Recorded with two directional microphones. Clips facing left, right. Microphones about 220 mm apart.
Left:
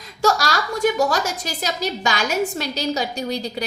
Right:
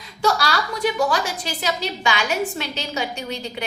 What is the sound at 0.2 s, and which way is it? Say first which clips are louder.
A woman's voice: left 1 dB; 45° left (ahead or behind).